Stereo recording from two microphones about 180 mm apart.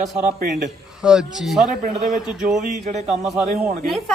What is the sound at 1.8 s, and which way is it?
Speech, 40° right (ahead or behind).